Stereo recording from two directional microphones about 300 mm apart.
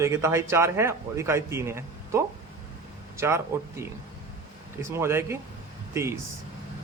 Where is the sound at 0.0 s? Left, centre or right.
Centre.